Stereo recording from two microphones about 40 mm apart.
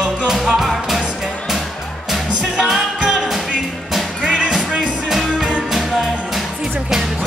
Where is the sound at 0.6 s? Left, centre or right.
Centre.